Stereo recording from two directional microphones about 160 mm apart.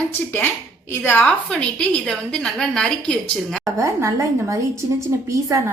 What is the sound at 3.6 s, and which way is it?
Speech, 20° right (ahead or behind).